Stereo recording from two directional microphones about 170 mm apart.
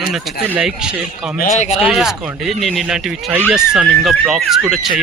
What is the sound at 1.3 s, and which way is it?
Speech, 50° left (ahead or behind).